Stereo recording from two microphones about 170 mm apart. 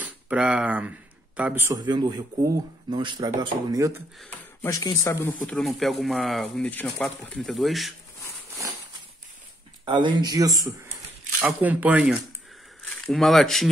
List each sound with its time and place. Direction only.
0.0 s speech: 5° right (ahead or behind)
1.9 s speech: 25° right (ahead or behind)
4.6 s speech: 20° left (ahead or behind)
5.5 s speech: centre (ahead or behind)
9.8 s speech: 30° right (ahead or behind)
11.4 s speech: 10° right (ahead or behind)